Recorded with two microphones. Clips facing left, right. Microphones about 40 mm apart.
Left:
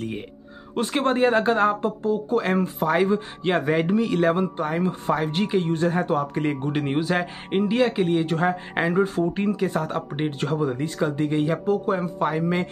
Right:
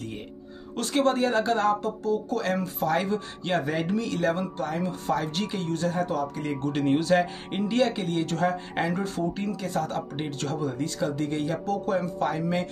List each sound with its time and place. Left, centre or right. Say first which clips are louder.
0.7 s speech: left 2 dB; left
6.6 s speech: even; left